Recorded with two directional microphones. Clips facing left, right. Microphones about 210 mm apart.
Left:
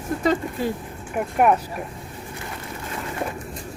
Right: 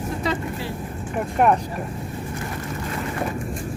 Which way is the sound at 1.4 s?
5° left (ahead or behind).